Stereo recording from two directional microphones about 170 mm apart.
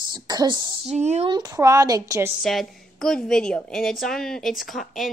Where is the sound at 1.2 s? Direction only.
25° right (ahead or behind).